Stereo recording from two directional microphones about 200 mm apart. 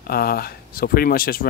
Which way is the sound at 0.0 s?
50° left (ahead or behind).